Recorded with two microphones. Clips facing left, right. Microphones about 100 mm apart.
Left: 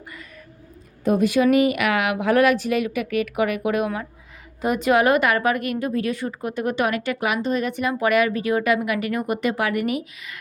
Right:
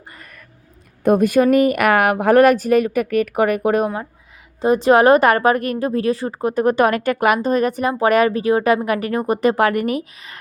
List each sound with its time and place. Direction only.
0.1 s whispering: 55° right (ahead or behind)
1.0 s a woman's voice: 50° right (ahead or behind)
4.6 s speech: 30° right (ahead or behind)